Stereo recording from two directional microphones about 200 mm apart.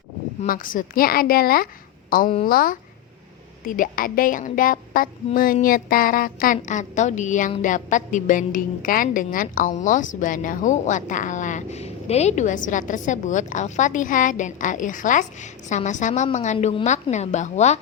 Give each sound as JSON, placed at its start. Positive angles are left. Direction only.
{"t": 0.4, "sound": "a woman's voice", "side_deg": 45}